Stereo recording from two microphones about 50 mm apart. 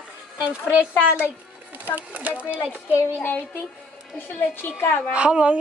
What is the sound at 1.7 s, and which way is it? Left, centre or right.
Speech, right.